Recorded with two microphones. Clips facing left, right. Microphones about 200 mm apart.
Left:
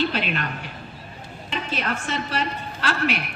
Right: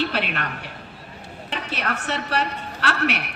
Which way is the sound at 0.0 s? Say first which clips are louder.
Left 1 dB; 65° right (ahead or behind).